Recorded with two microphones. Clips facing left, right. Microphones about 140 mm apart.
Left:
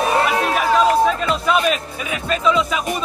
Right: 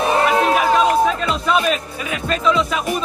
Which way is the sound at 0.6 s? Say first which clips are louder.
Even; centre (ahead or behind).